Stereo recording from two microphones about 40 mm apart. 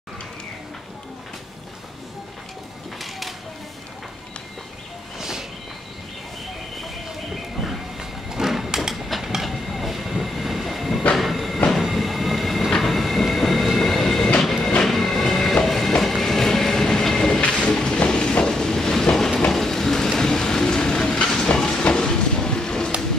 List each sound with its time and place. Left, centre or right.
3.0 s a sound: centre
7.6 s sliding door: centre
9.2 s train: centre
17.4 s train: left
19.5 s vehicle: centre
20.2 s train: centre
21.8 s a sound: centre